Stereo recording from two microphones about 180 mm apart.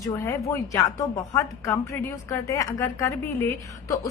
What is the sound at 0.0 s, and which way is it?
A woman's voice, 15° left (ahead or behind).